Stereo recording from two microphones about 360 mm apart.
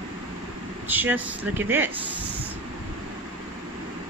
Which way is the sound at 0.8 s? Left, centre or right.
Centre.